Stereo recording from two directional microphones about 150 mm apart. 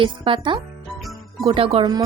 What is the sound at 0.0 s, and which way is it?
Speech, 35° right (ahead or behind).